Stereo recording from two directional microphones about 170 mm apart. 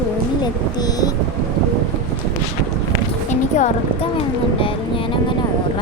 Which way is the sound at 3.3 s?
45° left (ahead or behind).